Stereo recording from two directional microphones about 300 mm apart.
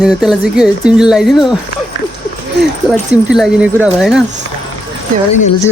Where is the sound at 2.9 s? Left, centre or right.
Centre.